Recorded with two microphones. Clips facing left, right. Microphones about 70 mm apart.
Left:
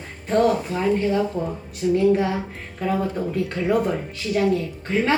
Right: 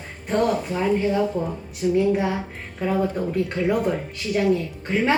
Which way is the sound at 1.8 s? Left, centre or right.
Centre.